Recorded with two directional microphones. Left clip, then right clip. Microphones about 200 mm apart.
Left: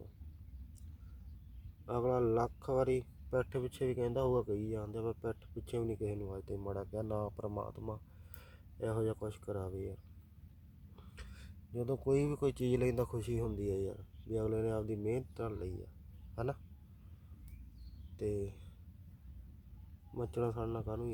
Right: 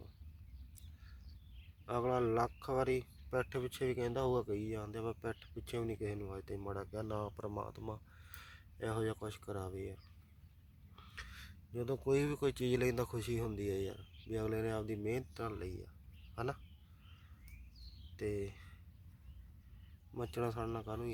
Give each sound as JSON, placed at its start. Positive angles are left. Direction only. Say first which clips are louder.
{"t": 1.9, "sound": "speech", "louder": "left 2 dB", "side_deg": 5}
{"t": 18.2, "sound": "speech", "louder": "left 2 dB", "side_deg": 0}
{"t": 20.3, "sound": "speech", "louder": "left 2 dB", "side_deg": 0}